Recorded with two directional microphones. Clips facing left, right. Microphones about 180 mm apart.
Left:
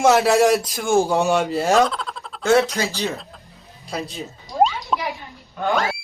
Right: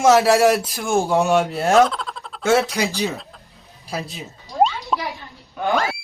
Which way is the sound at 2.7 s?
15° right (ahead or behind).